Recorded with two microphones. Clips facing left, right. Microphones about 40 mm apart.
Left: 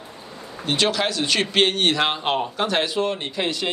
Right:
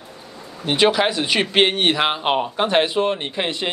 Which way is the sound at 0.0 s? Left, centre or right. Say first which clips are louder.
Even; left.